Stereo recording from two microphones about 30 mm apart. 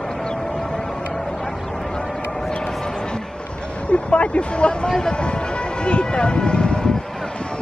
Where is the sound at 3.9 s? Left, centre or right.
Left.